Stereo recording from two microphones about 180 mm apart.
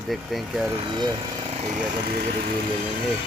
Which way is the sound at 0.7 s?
25° right (ahead or behind).